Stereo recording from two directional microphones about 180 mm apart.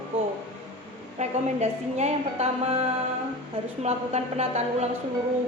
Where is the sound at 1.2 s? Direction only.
35° right (ahead or behind).